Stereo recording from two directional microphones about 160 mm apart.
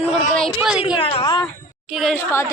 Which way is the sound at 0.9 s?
30° left (ahead or behind).